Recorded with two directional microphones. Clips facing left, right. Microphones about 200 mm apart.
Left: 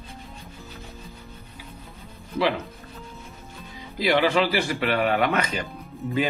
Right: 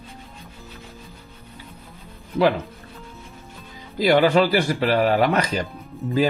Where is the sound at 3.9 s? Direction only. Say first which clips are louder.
Right 5 dB; 45° right (ahead or behind).